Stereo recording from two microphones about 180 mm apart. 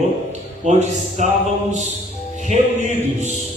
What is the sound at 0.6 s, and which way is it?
Speech, 40° right (ahead or behind).